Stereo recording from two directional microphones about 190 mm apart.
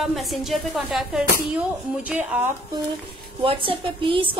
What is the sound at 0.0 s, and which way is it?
A woman's voice, centre (ahead or behind).